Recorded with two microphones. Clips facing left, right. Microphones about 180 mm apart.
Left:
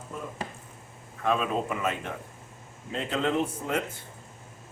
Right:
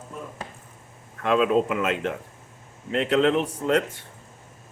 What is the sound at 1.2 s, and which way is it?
Speech, 90° right.